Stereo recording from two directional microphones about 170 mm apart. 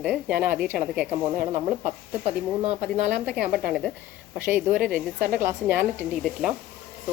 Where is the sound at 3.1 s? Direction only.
5° right (ahead or behind).